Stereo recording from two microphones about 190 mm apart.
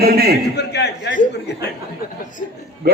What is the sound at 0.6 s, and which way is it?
A man's voice, 65° left (ahead or behind).